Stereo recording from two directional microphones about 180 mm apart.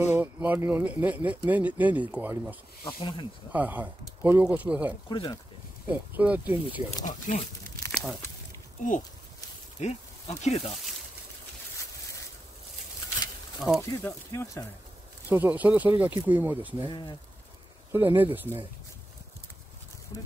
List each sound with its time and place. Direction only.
0.0 s speech: 10° right (ahead or behind)
3.0 s speech: 30° left (ahead or behind)
3.5 s speech: 10° right (ahead or behind)
5.1 s speech: 25° left (ahead or behind)
5.9 s speech: 10° right (ahead or behind)
7.1 s speech: 45° left (ahead or behind)
7.9 s a sound: centre (ahead or behind)
9.8 s speech: 40° left (ahead or behind)
13.6 s speech: centre (ahead or behind)
14.0 s speech: 15° left (ahead or behind)
15.2 s speech: 10° right (ahead or behind)
16.9 s speech: 25° left (ahead or behind)
17.9 s speech: 10° right (ahead or behind)